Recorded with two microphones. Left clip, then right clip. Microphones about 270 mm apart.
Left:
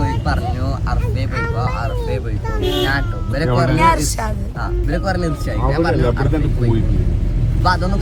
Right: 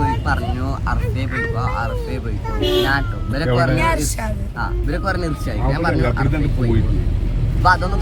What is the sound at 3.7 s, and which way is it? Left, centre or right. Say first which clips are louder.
Speech: left 5 dB; centre.